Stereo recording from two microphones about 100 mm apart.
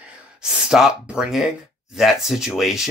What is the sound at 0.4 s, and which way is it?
Speech, 5° right (ahead or behind).